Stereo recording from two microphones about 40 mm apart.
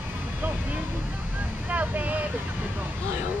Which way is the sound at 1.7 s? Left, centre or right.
Right.